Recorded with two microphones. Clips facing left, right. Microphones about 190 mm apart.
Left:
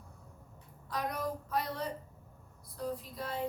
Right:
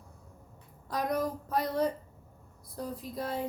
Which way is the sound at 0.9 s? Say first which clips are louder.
Right 5 dB; 40° right (ahead or behind).